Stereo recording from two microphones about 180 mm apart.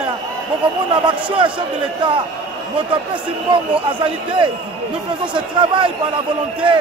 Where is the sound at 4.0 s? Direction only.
25° right (ahead or behind).